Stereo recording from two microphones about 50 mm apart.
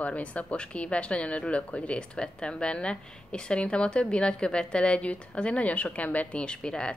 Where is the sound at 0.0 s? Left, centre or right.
Left.